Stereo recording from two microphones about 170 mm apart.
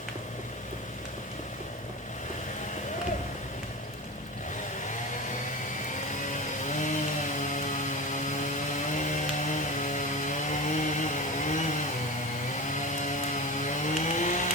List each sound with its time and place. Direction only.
6.7 s chainsaw: 50° left (ahead or behind)
8.9 s chainsaw: 45° left (ahead or behind)
12.9 s a sound: 45° left (ahead or behind)